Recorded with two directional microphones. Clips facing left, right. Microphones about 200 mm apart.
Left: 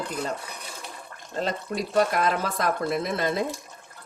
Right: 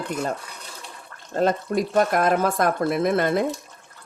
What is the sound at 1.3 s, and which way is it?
Speech, 50° right (ahead or behind).